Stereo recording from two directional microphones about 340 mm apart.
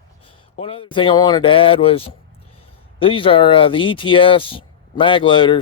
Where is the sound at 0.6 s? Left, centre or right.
Centre.